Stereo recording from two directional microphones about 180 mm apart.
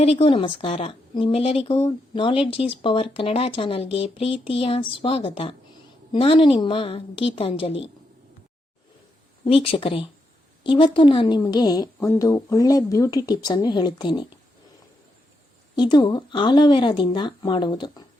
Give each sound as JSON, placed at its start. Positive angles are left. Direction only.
{"t": 0.0, "sound": "a woman's voice", "side_deg": 35}
{"t": 9.4, "sound": "a woman's voice", "side_deg": 30}
{"t": 15.7, "sound": "a woman's voice", "side_deg": 25}